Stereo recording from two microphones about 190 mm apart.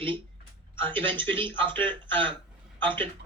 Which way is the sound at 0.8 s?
10° left (ahead or behind).